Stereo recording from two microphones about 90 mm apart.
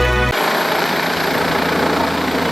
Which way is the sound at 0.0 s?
Centre (ahead or behind).